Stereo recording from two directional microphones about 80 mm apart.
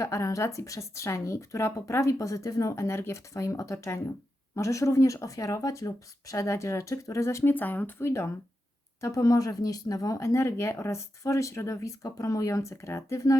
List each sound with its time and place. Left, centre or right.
0.0 s speech: left
7.5 s speech: left
9.0 s speech: left